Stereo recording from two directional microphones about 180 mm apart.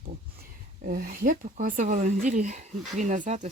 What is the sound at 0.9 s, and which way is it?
Speech, 55° right (ahead or behind).